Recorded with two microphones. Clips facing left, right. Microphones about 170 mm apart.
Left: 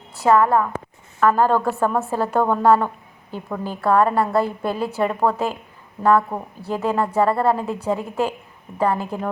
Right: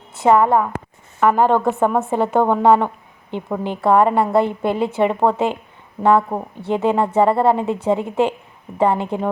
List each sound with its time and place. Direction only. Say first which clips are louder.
0.2 s a woman's voice: right 2 dB; 20° right (ahead or behind)